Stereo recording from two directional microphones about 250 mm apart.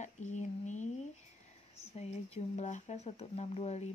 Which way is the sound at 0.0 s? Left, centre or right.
Left.